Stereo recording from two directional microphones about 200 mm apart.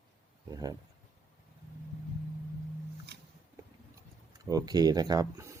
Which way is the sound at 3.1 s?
60° right (ahead or behind).